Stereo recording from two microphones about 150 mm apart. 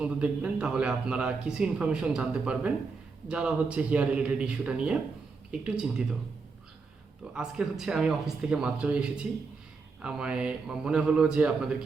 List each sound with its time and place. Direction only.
0.0 s speech: 10° right (ahead or behind)
7.3 s speech: 5° right (ahead or behind)